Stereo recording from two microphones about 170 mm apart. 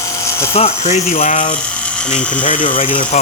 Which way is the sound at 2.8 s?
30° left (ahead or behind).